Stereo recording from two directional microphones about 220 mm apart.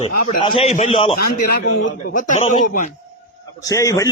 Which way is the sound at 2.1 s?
35° left (ahead or behind).